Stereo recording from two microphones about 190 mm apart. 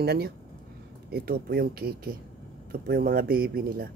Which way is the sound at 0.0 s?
55° right (ahead or behind).